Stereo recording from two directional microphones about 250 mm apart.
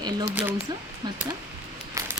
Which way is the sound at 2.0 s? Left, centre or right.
Centre.